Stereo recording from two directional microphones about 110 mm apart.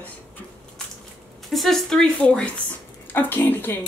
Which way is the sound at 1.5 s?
Centre (ahead or behind).